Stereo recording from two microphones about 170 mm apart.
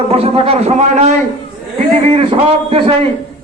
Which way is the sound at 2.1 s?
35° right (ahead or behind).